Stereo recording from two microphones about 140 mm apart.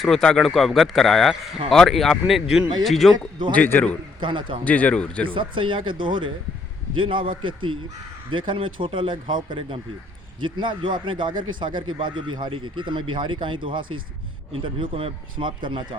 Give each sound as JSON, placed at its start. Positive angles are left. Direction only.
{"t": 0.0, "sound": "speech", "side_deg": 5}
{"t": 3.5, "sound": "speech", "side_deg": 15}
{"t": 4.2, "sound": "speech", "side_deg": -35}
{"t": 4.6, "sound": "speech", "side_deg": 10}
{"t": 5.2, "sound": "speech", "side_deg": -35}